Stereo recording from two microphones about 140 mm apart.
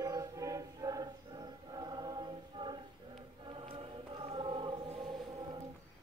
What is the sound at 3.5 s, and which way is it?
Choir, 40° right (ahead or behind).